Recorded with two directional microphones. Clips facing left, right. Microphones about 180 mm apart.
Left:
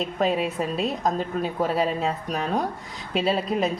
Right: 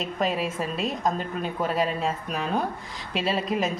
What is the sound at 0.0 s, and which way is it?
A woman's voice, centre (ahead or behind).